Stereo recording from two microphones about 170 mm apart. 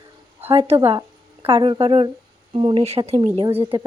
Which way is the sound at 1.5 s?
30° right (ahead or behind).